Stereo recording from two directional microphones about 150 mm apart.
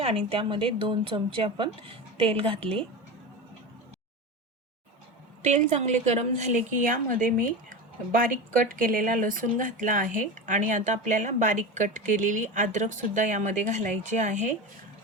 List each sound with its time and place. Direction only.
0.0 s speech: 35° right (ahead or behind)
5.4 s speech: 50° right (ahead or behind)